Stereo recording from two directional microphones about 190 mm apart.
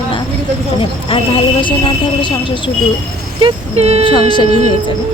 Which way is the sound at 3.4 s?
35° right (ahead or behind).